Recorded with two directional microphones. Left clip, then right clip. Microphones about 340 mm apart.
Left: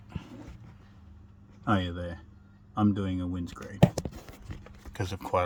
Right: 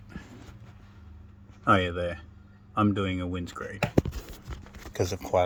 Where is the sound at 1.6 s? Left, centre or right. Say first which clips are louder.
Right 7 dB; centre.